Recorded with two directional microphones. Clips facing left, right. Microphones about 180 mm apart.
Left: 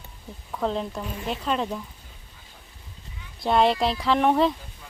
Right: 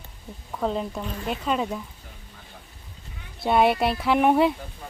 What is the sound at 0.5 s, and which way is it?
Speech, 5° right (ahead or behind).